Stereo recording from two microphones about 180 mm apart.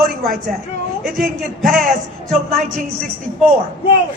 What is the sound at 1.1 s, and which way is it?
Speech, centre (ahead or behind).